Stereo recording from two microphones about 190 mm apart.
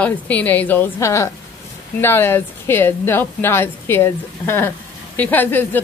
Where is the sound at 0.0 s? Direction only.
10° left (ahead or behind).